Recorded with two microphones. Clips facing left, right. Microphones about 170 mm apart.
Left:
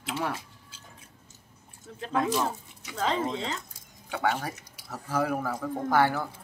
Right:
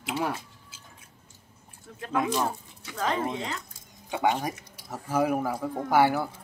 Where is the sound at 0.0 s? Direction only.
5° right (ahead or behind).